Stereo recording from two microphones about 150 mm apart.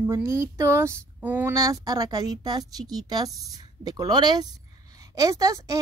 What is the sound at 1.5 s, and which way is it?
Speech, 25° right (ahead or behind).